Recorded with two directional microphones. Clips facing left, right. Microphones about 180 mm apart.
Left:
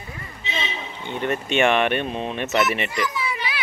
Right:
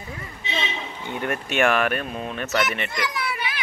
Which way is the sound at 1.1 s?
10° right (ahead or behind).